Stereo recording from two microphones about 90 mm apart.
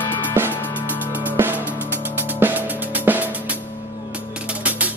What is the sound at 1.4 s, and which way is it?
Music, 20° right (ahead or behind).